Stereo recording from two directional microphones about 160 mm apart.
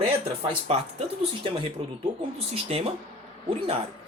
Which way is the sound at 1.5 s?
30° right (ahead or behind).